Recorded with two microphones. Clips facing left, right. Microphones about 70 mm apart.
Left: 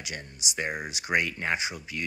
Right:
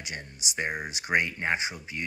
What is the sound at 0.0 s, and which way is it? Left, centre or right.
Speech, right.